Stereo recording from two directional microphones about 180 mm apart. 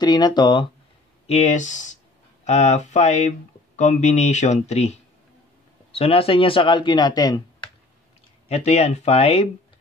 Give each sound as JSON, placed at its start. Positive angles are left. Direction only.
{"t": 0.0, "sound": "speech", "side_deg": 25}
{"t": 1.2, "sound": "speech", "side_deg": 40}
{"t": 8.5, "sound": "speech", "side_deg": 35}